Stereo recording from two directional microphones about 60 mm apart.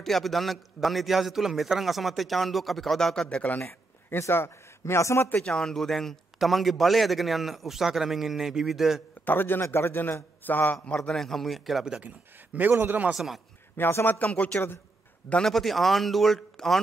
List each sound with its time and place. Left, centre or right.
0.0 s a man's voice: centre
3.3 s speech: left
4.3 s a man's voice: left
5.4 s a man's voice: centre
9.2 s a man's voice: left
11.0 s a man's voice: centre
12.5 s a man's voice: right
13.1 s a man's voice: centre
13.7 s a man's voice: left
14.0 s speech: left
15.4 s a man's voice: centre